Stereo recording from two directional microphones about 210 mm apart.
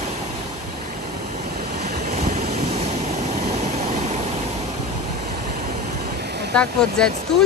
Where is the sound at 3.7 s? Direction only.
35° right (ahead or behind).